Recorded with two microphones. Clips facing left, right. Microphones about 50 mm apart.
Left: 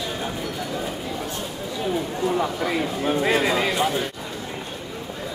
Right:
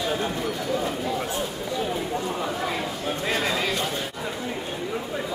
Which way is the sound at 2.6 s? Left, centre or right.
Centre.